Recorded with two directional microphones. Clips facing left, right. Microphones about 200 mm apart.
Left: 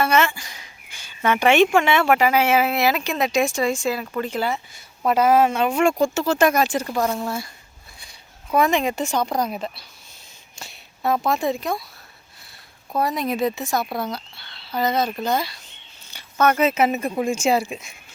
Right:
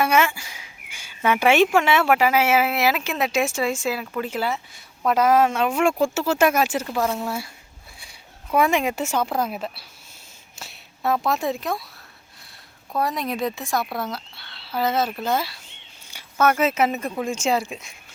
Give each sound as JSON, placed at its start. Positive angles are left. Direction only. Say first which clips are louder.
{"t": 0.0, "sound": "speech", "louder": "even", "side_deg": -10}
{"t": 13.0, "sound": "speech", "louder": "left 3 dB", "side_deg": 0}